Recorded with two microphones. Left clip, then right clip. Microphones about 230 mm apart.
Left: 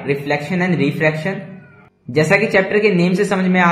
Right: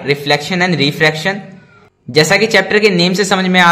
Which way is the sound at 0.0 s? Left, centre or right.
Right.